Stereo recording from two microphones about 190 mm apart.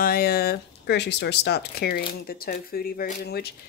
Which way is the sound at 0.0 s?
50° left (ahead or behind).